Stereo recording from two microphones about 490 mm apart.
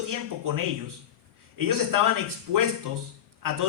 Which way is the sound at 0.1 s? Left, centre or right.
Right.